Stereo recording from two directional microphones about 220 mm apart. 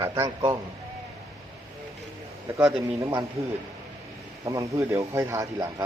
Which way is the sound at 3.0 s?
20° right (ahead or behind).